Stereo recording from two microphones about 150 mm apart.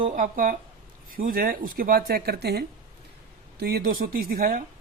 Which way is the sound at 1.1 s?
75° right (ahead or behind).